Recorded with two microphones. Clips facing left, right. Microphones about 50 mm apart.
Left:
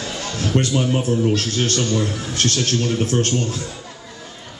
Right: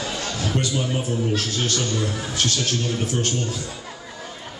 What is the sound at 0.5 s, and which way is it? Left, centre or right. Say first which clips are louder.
Speech: left 7 dB; left.